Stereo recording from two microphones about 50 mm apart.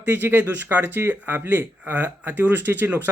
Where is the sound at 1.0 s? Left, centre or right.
Right.